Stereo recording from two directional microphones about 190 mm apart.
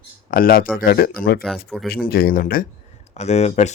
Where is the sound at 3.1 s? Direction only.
35° left (ahead or behind).